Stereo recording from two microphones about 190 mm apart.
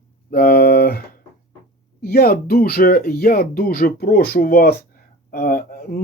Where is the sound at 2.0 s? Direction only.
55° left (ahead or behind).